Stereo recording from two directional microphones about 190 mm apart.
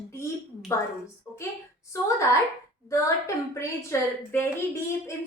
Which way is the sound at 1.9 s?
15° left (ahead or behind).